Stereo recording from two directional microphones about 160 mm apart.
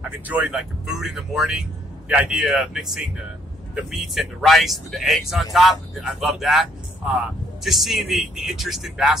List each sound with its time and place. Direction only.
0.3 s speech: 5° right (ahead or behind)